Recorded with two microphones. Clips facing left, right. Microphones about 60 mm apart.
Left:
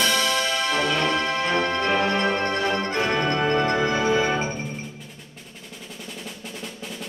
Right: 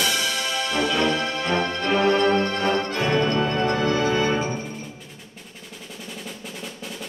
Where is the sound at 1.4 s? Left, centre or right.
Centre.